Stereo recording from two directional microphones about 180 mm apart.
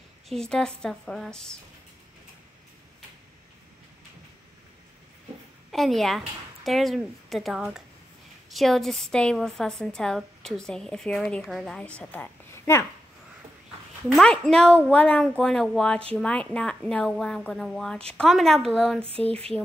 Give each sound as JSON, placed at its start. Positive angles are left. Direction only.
{"t": 0.3, "sound": "a woman's voice", "side_deg": 5}
{"t": 5.7, "sound": "a woman's voice", "side_deg": 0}
{"t": 14.0, "sound": "a woman's voice", "side_deg": 0}
{"t": 19.0, "sound": "a sound", "side_deg": -35}